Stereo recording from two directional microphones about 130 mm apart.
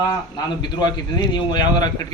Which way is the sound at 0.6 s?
35° left (ahead or behind).